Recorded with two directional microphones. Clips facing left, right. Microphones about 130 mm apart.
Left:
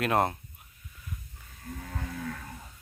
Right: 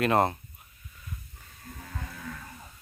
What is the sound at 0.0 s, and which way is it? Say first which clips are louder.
Speech: right 2 dB; centre (ahead or behind).